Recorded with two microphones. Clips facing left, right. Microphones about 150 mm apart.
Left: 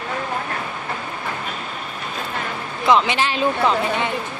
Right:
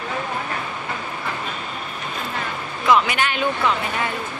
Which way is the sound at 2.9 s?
30° left (ahead or behind).